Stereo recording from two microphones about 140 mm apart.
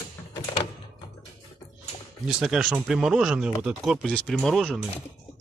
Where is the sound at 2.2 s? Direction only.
5° right (ahead or behind).